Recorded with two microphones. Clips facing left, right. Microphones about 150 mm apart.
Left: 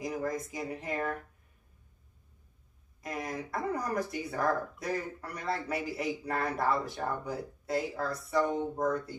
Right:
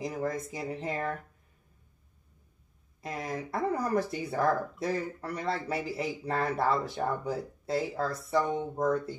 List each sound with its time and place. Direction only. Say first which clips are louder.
0.0 s speech: right 1 dB; 25° right (ahead or behind)
3.0 s speech: right 1 dB; 25° right (ahead or behind)